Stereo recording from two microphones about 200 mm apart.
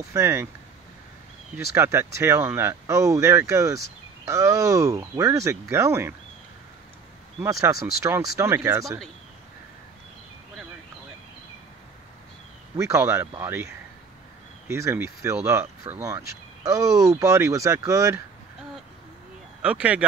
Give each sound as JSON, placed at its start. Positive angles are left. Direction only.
{"t": 0.1, "sound": "speech", "side_deg": -15}
{"t": 1.7, "sound": "speech", "side_deg": -10}
{"t": 7.6, "sound": "speech", "side_deg": -15}
{"t": 12.7, "sound": "speech", "side_deg": -15}
{"t": 14.7, "sound": "speech", "side_deg": -15}
{"t": 19.6, "sound": "speech", "side_deg": -5}